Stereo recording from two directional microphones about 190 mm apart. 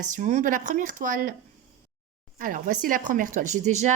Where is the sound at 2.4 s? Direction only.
45° right (ahead or behind).